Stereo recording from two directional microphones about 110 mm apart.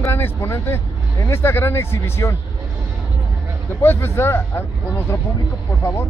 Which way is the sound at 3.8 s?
20° left (ahead or behind).